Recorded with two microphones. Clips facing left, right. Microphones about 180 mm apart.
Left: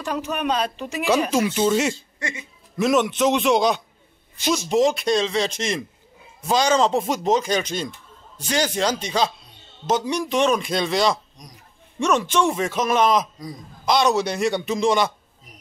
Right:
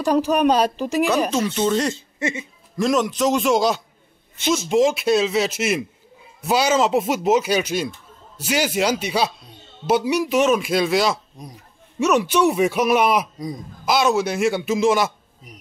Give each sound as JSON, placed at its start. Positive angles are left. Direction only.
{"t": 0.0, "sound": "speech", "side_deg": -35}
{"t": 1.3, "sound": "speech", "side_deg": 10}
{"t": 2.0, "sound": "speech", "side_deg": -25}
{"t": 2.8, "sound": "a man's voice", "side_deg": 0}